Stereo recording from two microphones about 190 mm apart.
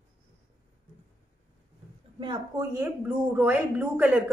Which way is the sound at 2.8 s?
10° right (ahead or behind).